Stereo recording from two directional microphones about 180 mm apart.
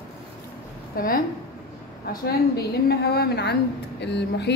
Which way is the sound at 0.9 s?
55° left (ahead or behind).